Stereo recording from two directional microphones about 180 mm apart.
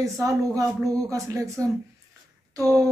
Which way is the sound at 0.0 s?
15° right (ahead or behind).